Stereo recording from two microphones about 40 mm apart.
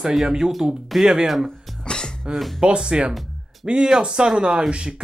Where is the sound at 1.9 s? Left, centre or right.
Left.